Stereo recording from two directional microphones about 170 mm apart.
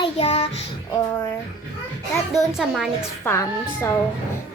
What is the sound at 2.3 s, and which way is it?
Speech, centre (ahead or behind).